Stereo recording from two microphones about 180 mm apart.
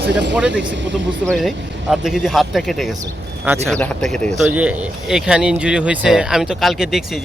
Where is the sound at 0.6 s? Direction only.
85° right.